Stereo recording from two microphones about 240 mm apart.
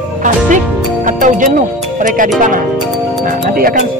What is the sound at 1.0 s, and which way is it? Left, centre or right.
Speech, right.